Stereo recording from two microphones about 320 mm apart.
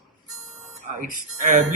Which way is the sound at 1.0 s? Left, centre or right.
Right.